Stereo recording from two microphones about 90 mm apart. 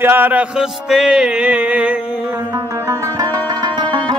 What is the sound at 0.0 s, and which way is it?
Music, 20° right (ahead or behind).